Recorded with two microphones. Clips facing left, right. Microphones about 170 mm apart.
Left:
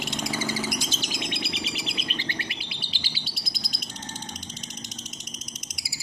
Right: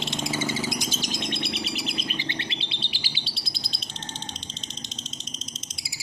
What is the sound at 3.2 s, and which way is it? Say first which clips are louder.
Bird: even; 30° right (ahead or behind).